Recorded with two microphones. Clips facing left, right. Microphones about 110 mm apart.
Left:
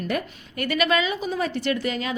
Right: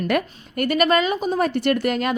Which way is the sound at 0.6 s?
45° right (ahead or behind).